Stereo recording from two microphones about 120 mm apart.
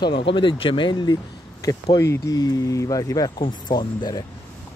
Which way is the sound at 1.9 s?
25° left (ahead or behind).